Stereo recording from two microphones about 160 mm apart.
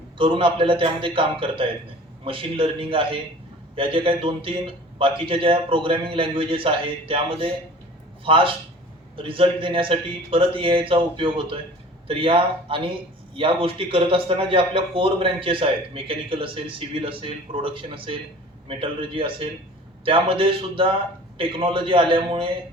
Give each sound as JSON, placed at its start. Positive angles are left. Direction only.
{"t": 0.2, "sound": "a man's voice", "side_deg": -35}